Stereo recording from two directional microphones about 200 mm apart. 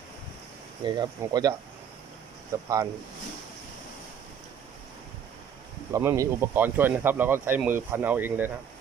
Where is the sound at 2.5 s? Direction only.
15° right (ahead or behind).